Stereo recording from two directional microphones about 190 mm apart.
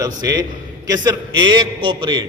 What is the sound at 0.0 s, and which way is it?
A man's voice, 20° right (ahead or behind).